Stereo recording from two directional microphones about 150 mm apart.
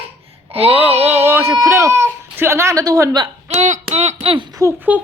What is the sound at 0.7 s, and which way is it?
Speech, 15° right (ahead or behind).